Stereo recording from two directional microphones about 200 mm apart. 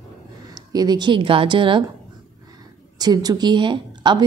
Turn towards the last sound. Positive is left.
turn(degrees=-20)  # may be behind; listen again after turning